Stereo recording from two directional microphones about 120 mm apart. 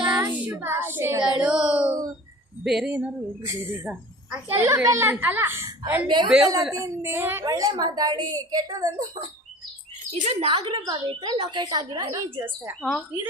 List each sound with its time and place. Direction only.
0.2 s child singing: 15° right (ahead or behind)
1.2 s a sound: 5° right (ahead or behind)
2.6 s speech: 5° right (ahead or behind)
3.4 s a child's voice: 25° right (ahead or behind)
3.8 s a woman's voice: 10° right (ahead or behind)
4.5 s a child's voice: 20° right (ahead or behind)
6.2 s speech: centre (ahead or behind)
6.7 s a child's voice: 20° right (ahead or behind)
7.4 s a woman's voice: 30° right (ahead or behind)
10.1 s speech: 60° right (ahead or behind)
10.5 s a woman's voice: 35° right (ahead or behind)
12.8 s speech: 5° left (ahead or behind)